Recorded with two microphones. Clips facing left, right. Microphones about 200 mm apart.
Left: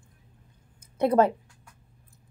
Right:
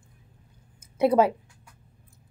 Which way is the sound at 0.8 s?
5° right (ahead or behind).